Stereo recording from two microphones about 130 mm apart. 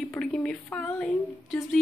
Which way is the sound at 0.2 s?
5° left (ahead or behind).